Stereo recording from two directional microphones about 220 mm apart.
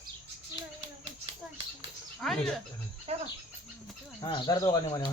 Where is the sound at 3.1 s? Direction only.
30° right (ahead or behind).